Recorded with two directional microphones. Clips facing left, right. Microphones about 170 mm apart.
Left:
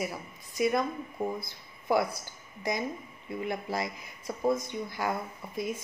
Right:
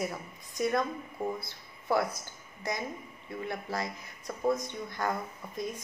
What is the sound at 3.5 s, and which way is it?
Speech, 10° left (ahead or behind).